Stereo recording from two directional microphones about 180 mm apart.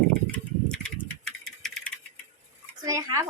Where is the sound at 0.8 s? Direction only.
5° left (ahead or behind).